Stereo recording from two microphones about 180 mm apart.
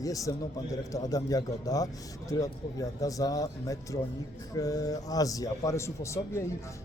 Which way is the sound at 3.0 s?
20° left (ahead or behind).